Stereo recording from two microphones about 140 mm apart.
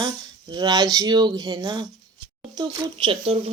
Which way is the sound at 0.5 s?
30° right (ahead or behind).